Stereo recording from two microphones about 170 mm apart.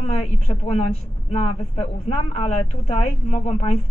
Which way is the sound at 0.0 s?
40° left (ahead or behind).